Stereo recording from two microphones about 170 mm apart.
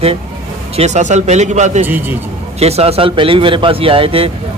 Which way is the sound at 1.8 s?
10° right (ahead or behind).